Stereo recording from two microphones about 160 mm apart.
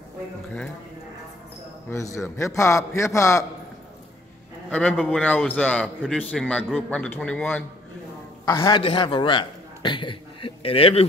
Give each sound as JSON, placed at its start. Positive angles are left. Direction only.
{"t": 2.1, "sound": "a man's voice", "side_deg": 20}
{"t": 4.6, "sound": "a man's voice", "side_deg": 10}
{"t": 8.5, "sound": "a man's voice", "side_deg": 25}